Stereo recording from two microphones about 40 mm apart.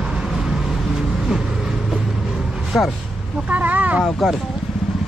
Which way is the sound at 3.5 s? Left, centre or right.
Right.